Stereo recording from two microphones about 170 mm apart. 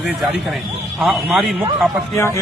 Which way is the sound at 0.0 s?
Centre (ahead or behind).